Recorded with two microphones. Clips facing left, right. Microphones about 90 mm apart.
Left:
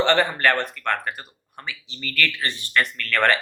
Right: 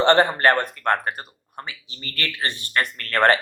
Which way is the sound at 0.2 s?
40° right (ahead or behind).